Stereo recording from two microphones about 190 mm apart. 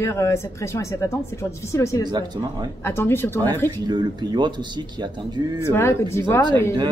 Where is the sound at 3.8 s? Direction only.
20° right (ahead or behind).